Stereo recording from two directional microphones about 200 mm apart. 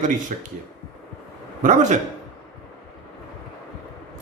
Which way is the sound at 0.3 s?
40° right (ahead or behind).